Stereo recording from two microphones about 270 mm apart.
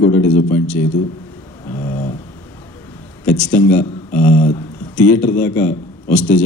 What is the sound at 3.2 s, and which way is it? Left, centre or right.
Speech, centre.